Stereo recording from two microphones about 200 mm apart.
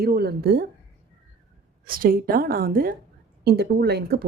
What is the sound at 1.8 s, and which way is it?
A woman's voice, 45° right (ahead or behind).